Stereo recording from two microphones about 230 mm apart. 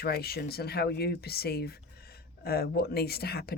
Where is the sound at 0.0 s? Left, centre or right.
Left.